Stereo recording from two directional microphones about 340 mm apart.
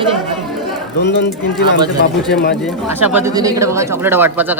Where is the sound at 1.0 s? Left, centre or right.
Left.